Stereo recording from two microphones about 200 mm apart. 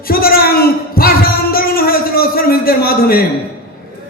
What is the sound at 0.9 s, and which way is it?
Music, 45° left (ahead or behind).